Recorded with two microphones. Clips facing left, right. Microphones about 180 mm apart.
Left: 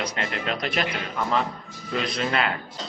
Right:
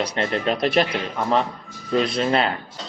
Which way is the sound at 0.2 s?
35° right (ahead or behind).